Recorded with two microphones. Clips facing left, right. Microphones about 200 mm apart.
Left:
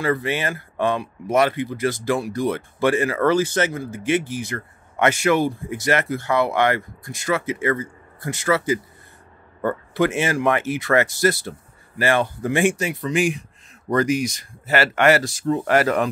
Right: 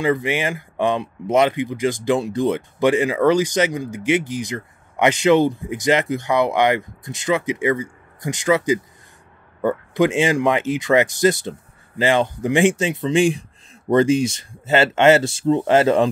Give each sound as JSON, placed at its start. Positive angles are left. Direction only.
{"t": 0.0, "sound": "speech", "side_deg": -15}